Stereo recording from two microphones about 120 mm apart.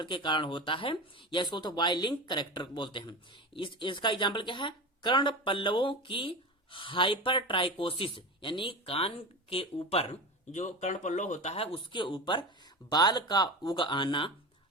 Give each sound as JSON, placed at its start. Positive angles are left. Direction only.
{"t": 0.0, "sound": "speech", "side_deg": 40}
{"t": 11.5, "sound": "speech", "side_deg": 50}